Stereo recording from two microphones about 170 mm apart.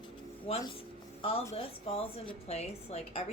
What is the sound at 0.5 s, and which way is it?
Speech, 35° left (ahead or behind).